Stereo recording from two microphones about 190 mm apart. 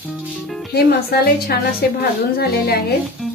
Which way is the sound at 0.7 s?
55° left (ahead or behind).